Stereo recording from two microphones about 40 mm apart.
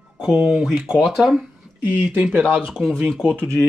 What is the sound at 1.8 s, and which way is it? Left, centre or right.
Speech, right.